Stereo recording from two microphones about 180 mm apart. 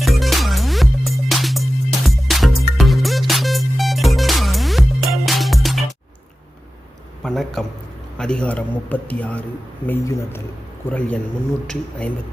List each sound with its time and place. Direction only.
0.0 s music: centre (ahead or behind)
7.2 s a sound: centre (ahead or behind)
8.2 s a man's voice: 5° left (ahead or behind)